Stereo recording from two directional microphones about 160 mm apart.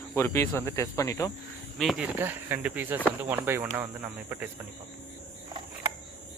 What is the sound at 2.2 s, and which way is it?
Speech, 10° right (ahead or behind).